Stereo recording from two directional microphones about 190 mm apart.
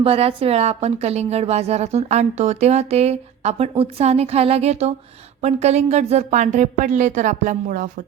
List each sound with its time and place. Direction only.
0.0 s a woman's voice: 30° right (ahead or behind)